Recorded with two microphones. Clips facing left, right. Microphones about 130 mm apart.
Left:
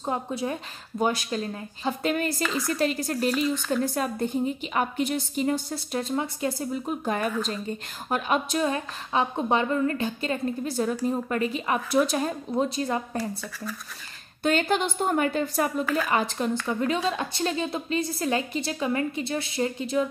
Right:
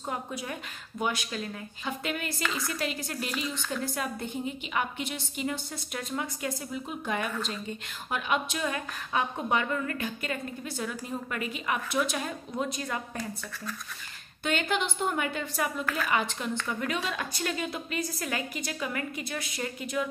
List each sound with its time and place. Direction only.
0.0 s a woman's voice: 30° left (ahead or behind)
3.5 s speech: 5° left (ahead or behind)
3.8 s a woman's voice: 40° left (ahead or behind)
14.4 s a woman's voice: 40° left (ahead or behind)
15.8 s speech: centre (ahead or behind)
16.1 s a woman's voice: 40° left (ahead or behind)